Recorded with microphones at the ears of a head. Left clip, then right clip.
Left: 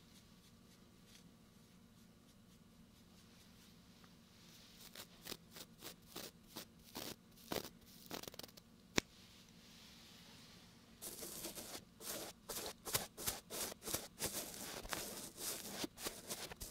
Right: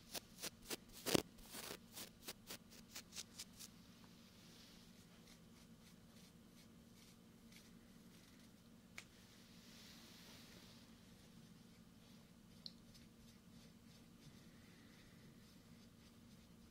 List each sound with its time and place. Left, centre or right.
0.1 s shuffling cards: right
4.9 s shuffling cards: left
11.1 s a sound: left